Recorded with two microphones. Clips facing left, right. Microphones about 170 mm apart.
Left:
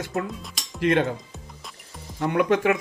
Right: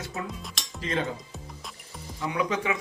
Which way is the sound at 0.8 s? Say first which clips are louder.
Left 8 dB; 65° left (ahead or behind).